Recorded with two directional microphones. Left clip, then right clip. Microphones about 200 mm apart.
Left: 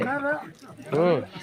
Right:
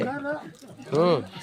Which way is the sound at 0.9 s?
5° right (ahead or behind).